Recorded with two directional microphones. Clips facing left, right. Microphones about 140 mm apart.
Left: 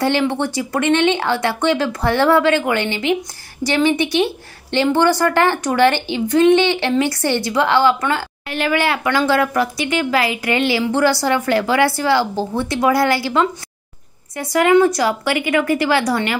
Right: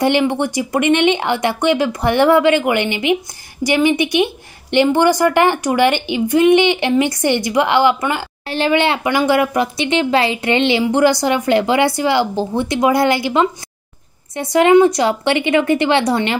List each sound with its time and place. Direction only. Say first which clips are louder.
0.0 s a woman's voice: right 2 dB; 15° right (ahead or behind)
8.5 s speech: right 3 dB; 25° right (ahead or behind)